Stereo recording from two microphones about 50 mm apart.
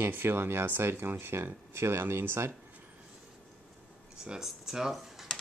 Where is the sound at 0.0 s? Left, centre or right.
Right.